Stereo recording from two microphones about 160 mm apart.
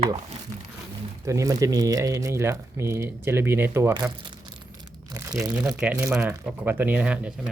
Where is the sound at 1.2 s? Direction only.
20° right (ahead or behind).